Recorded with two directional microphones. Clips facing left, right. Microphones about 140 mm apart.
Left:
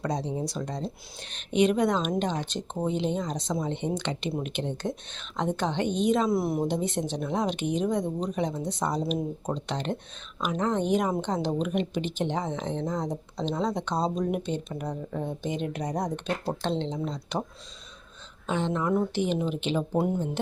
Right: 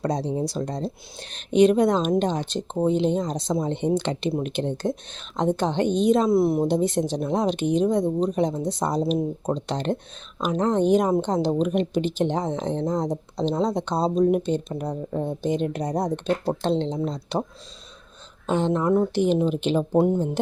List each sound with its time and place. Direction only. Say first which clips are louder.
0.0 s a woman's voice: right 5 dB; 35° right (ahead or behind)
18.4 s a woman's voice: right 6 dB; 35° right (ahead or behind)